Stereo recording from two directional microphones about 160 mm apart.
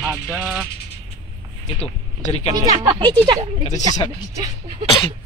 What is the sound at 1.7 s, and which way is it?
Speech, 40° left (ahead or behind).